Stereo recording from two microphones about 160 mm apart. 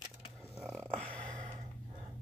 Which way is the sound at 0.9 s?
10° left (ahead or behind).